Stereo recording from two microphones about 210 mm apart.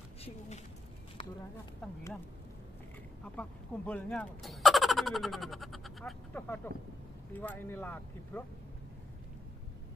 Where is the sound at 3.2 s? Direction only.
5° left (ahead or behind).